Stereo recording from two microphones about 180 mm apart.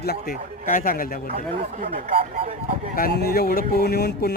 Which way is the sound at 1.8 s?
35° right (ahead or behind).